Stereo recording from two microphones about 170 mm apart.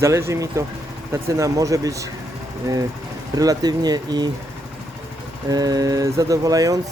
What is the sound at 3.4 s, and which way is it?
Speech, 20° right (ahead or behind).